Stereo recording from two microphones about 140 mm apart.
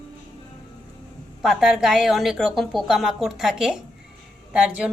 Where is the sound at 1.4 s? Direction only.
5° right (ahead or behind).